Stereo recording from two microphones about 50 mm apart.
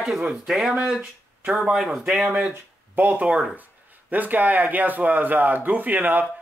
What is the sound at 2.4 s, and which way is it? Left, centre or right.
Speech, right.